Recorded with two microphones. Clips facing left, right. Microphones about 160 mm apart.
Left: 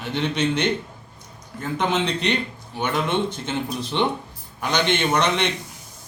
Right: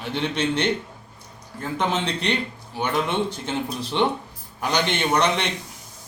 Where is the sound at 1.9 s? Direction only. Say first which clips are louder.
Left 2 dB; 35° right (ahead or behind).